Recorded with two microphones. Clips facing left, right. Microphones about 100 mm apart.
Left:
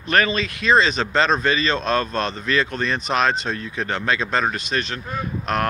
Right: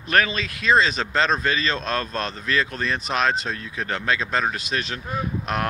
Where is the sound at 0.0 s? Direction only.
5° right (ahead or behind).